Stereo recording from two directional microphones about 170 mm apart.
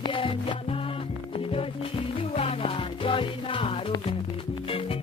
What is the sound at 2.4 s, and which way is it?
Music, 30° left (ahead or behind).